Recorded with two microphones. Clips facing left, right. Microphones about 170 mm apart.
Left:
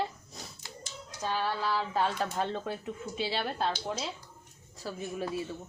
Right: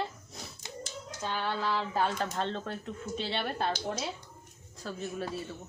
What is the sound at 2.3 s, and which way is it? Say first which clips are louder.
Speech: left 1 dB; 10° left (ahead or behind).